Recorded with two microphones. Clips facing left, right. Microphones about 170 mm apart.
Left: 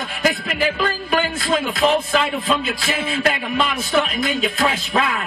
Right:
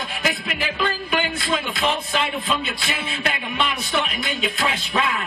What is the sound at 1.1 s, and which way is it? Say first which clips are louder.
Music: left 6 dB; 40° left (ahead or behind).